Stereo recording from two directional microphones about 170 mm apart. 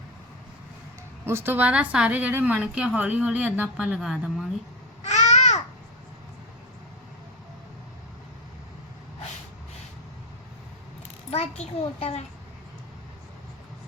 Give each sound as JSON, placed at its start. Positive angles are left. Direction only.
{"t": 1.2, "sound": "a woman's voice", "side_deg": -15}
{"t": 5.0, "sound": "babbling", "side_deg": 40}
{"t": 11.3, "sound": "a child's voice", "side_deg": 40}